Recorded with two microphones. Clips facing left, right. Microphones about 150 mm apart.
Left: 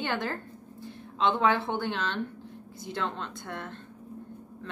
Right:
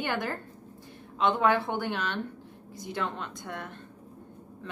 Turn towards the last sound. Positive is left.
turn(degrees=-10)  # may be behind; listen again after turning